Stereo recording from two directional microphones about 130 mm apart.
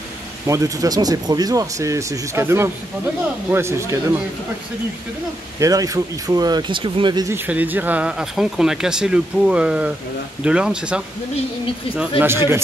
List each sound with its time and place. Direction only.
0.5 s speech: 25° right (ahead or behind)
5.6 s speech: 25° right (ahead or behind)
7.2 s speech: 15° right (ahead or behind)
12.2 s speech: 20° right (ahead or behind)